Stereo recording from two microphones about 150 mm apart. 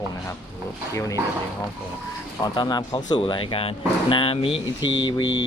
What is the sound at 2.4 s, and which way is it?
Speech, 25° left (ahead or behind).